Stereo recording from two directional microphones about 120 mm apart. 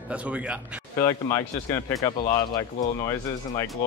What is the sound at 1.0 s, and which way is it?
Speech, 25° left (ahead or behind).